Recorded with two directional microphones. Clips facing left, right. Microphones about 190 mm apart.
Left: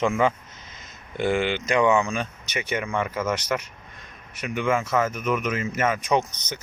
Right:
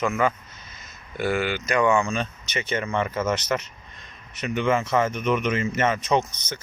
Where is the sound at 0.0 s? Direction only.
25° left (ahead or behind).